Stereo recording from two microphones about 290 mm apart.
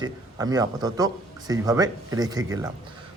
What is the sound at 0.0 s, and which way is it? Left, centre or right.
A man's voice, centre.